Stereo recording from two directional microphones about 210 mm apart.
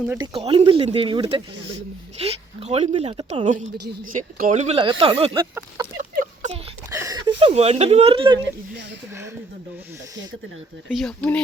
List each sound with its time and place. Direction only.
0.2 s speech: 25° right (ahead or behind)
4.1 s speech: 40° right (ahead or behind); by 5.9 s 20° right (ahead or behind)
6.9 s a sound: 15° right (ahead or behind)
7.3 s speech: 25° right (ahead or behind)
10.8 s speech: 5° left (ahead or behind)